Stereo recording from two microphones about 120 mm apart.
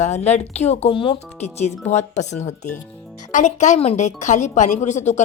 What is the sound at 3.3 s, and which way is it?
Speech, 90° left.